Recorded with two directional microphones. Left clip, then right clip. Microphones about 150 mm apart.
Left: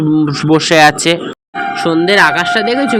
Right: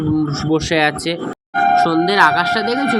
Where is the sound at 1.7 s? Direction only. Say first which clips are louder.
Left 6 dB; 35° left (ahead or behind).